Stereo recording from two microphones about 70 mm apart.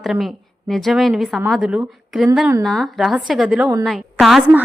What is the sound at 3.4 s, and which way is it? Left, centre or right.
Speech, centre.